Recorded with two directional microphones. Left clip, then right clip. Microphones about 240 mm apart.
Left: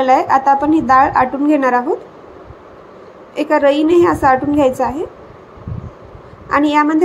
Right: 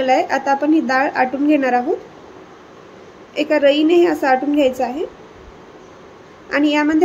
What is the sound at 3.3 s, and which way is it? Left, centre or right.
Speech, centre.